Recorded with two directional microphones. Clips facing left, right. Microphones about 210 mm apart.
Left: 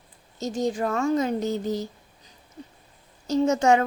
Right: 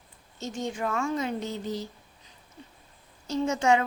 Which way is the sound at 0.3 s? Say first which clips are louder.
Left 7 dB; 40° left (ahead or behind).